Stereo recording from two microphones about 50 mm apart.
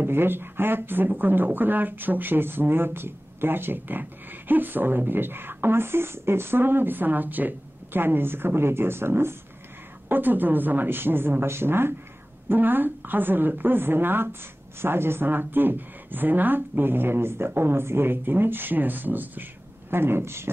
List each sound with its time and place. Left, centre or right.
0.0 s speech: right
10.0 s speech: right
19.9 s speech: right